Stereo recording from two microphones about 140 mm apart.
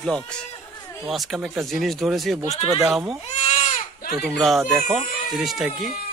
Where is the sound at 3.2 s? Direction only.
55° left (ahead or behind).